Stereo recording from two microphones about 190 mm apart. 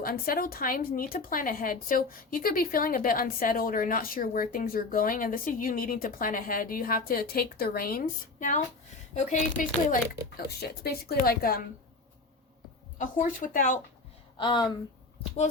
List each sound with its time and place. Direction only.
0.0 s speech: 50° left (ahead or behind)
13.0 s speech: 45° left (ahead or behind)
14.3 s speech: 25° left (ahead or behind)